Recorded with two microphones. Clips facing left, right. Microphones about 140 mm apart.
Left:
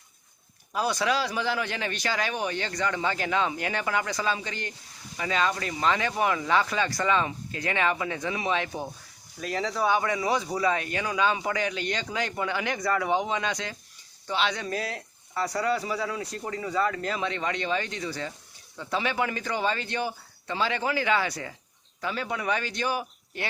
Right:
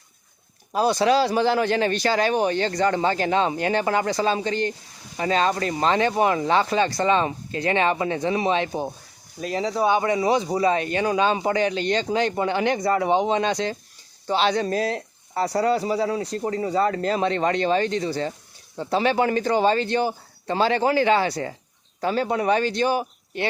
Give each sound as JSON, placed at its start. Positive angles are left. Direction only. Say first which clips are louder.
{"t": 0.7, "sound": "speech", "louder": "right 7 dB", "side_deg": -30}